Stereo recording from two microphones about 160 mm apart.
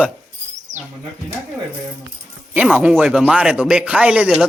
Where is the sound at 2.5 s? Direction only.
10° right (ahead or behind).